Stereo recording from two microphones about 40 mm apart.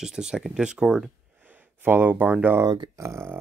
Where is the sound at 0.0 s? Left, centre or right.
Centre.